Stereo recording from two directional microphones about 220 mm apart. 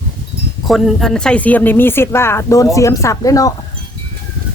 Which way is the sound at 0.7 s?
Centre (ahead or behind).